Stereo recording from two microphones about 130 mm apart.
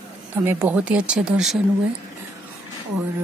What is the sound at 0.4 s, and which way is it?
Speech, 15° right (ahead or behind).